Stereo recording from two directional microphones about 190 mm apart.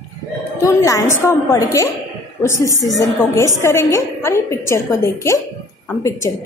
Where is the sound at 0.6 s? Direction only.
20° left (ahead or behind).